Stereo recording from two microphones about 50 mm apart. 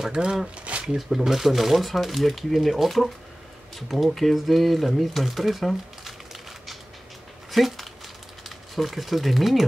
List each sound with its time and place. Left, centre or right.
0.1 s speech: centre
0.8 s speech: centre
7.5 s a sound: centre
8.5 s speech: centre